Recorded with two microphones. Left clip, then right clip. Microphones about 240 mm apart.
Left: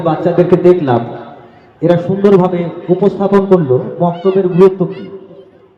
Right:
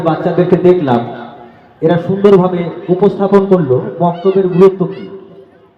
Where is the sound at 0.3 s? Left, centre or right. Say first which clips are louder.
Left 4 dB; left.